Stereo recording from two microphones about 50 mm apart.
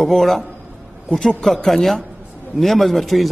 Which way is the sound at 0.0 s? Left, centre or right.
Centre.